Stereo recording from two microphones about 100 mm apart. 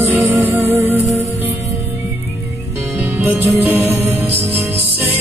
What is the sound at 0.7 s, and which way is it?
Music, 20° right (ahead or behind).